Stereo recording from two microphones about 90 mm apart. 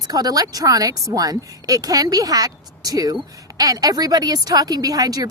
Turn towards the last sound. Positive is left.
turn(degrees=-45)  # may be behind; listen again after turning